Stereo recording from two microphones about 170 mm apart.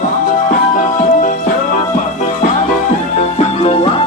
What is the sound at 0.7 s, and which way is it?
Music, 50° left (ahead or behind).